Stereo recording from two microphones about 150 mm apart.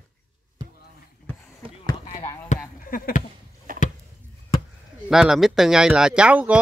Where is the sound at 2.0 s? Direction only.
45° left (ahead or behind).